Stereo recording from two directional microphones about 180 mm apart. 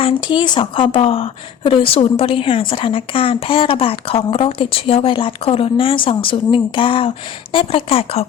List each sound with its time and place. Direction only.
0.0 s a woman's voice: 25° left (ahead or behind)